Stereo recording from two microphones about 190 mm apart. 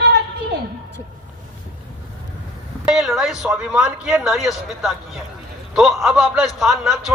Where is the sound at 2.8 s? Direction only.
Centre (ahead or behind).